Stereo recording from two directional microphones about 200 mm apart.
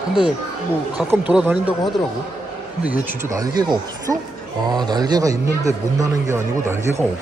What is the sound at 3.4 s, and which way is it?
Speech, 20° right (ahead or behind).